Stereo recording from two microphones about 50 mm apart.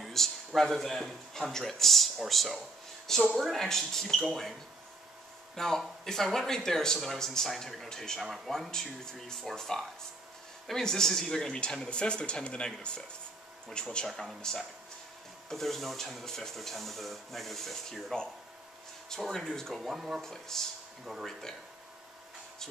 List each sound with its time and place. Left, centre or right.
0.0 s a sound: centre
0.6 s speech: centre
5.6 s speech: centre
14.0 s speech: centre
19.3 s speech: centre
20.2 s speech: centre
21.0 s speech: centre
21.3 s speech: centre